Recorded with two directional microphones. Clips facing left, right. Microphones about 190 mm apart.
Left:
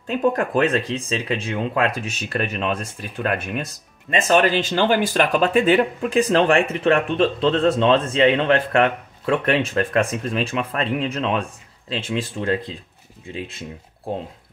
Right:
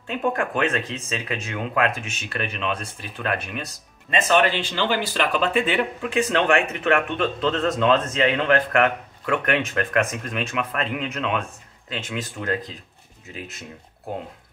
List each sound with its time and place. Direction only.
0.0 s speech: 35° left (ahead or behind)